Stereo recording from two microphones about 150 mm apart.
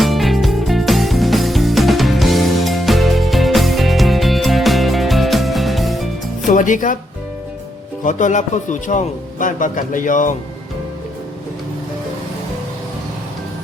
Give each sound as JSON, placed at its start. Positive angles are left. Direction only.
{"t": 0.0, "sound": "music", "side_deg": 0}
{"t": 6.5, "sound": "speech", "side_deg": 60}
{"t": 8.0, "sound": "a man's voice", "side_deg": 55}